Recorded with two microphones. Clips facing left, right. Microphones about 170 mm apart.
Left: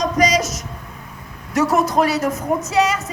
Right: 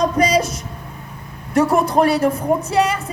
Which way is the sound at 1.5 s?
60° right (ahead or behind).